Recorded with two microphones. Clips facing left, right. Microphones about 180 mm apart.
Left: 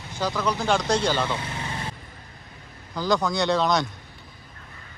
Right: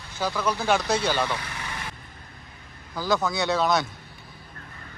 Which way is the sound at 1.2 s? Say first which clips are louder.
Left 2 dB; 25° left (ahead or behind).